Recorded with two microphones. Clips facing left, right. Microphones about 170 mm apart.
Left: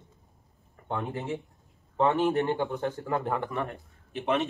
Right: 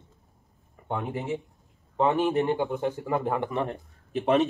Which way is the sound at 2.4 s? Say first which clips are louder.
Right 2 dB; 15° right (ahead or behind).